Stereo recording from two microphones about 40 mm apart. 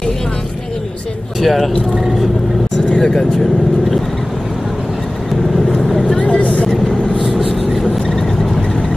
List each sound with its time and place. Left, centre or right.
1.4 s speech: centre
3.0 s speech: centre
5.8 s vehicle: centre
6.1 s speech: left
7.2 s vehicle: centre